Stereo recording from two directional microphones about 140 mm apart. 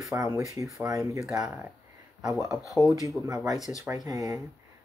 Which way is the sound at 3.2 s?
25° right (ahead or behind).